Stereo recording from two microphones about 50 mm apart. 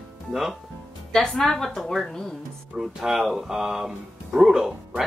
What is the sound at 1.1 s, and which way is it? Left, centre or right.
Speech, centre.